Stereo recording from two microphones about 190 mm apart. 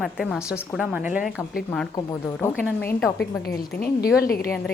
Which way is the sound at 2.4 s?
10° left (ahead or behind).